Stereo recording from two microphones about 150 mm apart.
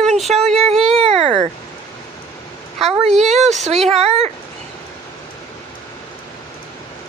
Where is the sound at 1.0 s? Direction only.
40° right (ahead or behind).